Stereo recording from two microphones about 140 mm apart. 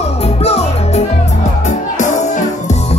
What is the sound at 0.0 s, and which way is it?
Music, 45° left (ahead or behind).